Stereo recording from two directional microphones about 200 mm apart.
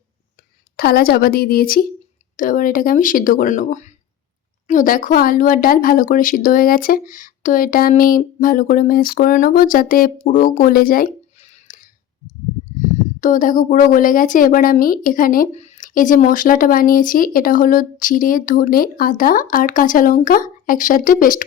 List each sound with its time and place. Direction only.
0.8 s a woman's voice: 50° left (ahead or behind)
13.1 s a woman's voice: 40° left (ahead or behind)